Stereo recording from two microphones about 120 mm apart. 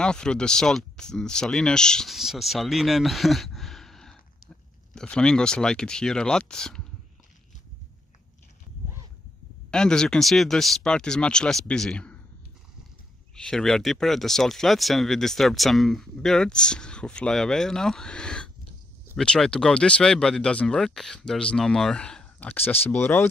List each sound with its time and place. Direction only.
0.0 s speech: 5° left (ahead or behind)
9.7 s speech: 5° left (ahead or behind)
13.4 s speech: 5° left (ahead or behind)